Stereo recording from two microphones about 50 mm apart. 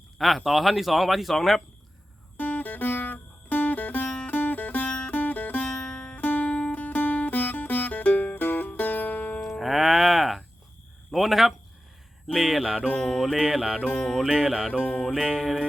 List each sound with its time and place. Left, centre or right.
0.2 s speech: centre
2.4 s music: left
5.7 s music: centre
6.1 s music: left
9.6 s music: centre
11.1 s a sound: centre
12.3 s speech: centre
12.8 s music: centre
13.3 s mantra: centre
13.8 s music: centre
14.3 s music: centre
14.8 s music: centre